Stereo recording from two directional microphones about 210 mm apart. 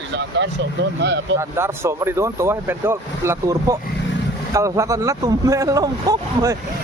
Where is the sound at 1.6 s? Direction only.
10° right (ahead or behind).